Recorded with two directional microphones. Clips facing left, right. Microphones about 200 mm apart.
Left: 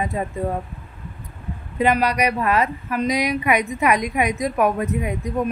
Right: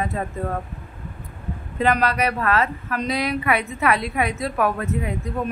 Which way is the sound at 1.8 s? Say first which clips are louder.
Left 2 dB; 10° left (ahead or behind).